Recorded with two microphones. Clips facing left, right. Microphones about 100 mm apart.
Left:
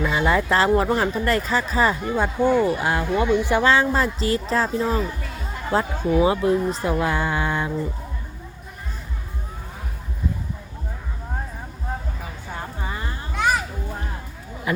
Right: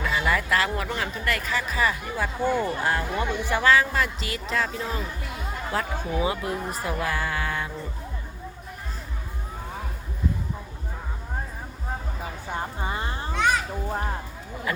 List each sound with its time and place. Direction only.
0.0 s speech: 25° left (ahead or behind)
12.8 s a sound: 25° right (ahead or behind)
13.3 s children playing: 5° left (ahead or behind)